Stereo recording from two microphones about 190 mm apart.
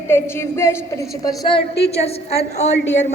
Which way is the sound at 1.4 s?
30° left (ahead or behind).